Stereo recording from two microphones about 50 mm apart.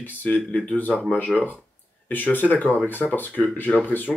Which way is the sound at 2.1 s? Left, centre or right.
Left.